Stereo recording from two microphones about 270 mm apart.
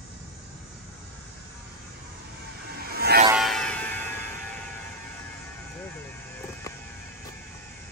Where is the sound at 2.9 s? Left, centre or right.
Right.